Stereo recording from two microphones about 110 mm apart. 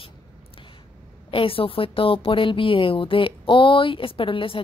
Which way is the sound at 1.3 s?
55° left (ahead or behind).